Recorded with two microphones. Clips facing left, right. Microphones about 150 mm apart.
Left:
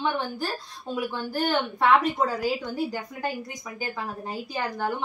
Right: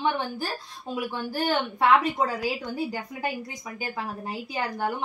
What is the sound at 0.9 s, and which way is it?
A woman's voice, 5° right (ahead or behind).